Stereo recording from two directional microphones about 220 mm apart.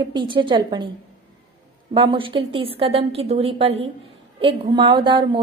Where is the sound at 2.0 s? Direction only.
20° right (ahead or behind).